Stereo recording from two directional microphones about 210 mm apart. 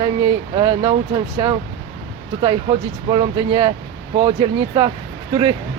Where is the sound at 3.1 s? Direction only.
25° right (ahead or behind).